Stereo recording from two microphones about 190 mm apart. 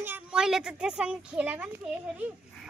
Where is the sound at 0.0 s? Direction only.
10° right (ahead or behind).